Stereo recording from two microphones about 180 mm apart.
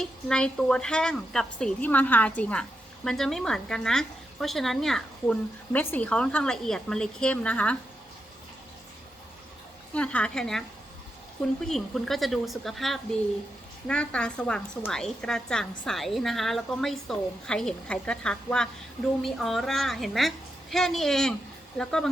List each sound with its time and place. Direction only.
0.0 s a woman's voice: 5° left (ahead or behind)
9.9 s a woman's voice: 5° left (ahead or behind)
11.6 s a woman's voice: centre (ahead or behind)